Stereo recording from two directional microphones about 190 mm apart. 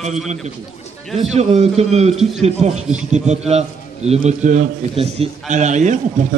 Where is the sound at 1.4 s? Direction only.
35° right (ahead or behind).